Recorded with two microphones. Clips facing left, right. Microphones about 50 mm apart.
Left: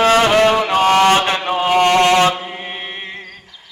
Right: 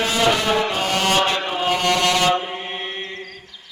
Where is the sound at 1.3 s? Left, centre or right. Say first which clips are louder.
Left 4 dB; left.